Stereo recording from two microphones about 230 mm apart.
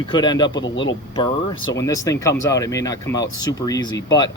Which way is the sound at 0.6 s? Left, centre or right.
Left.